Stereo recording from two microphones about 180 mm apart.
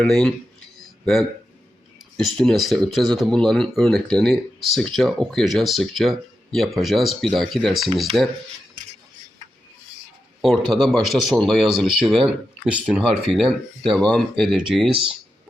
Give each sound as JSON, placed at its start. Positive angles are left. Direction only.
{"t": 0.0, "sound": "speech", "side_deg": 0}
{"t": 2.1, "sound": "speech", "side_deg": 5}
{"t": 10.4, "sound": "speech", "side_deg": 0}